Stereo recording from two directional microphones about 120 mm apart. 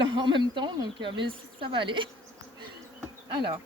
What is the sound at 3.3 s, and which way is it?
Speech, 40° right (ahead or behind).